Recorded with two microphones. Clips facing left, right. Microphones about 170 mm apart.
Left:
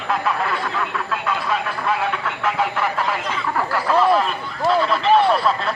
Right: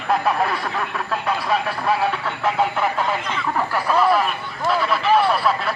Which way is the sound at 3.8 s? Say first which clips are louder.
Left 1 dB; 10° right (ahead or behind).